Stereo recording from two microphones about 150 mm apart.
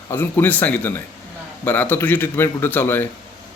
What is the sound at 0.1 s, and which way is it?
A man's voice, 15° left (ahead or behind).